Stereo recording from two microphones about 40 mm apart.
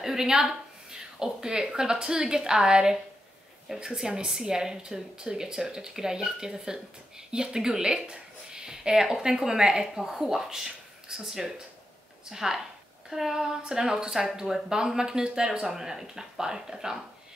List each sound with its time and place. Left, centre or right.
0.0 s a woman's voice: centre